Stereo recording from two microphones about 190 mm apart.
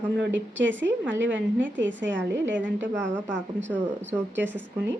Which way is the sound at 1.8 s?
75° right (ahead or behind).